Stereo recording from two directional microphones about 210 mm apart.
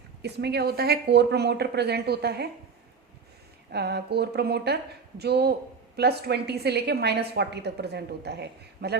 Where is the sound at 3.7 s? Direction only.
50° right (ahead or behind).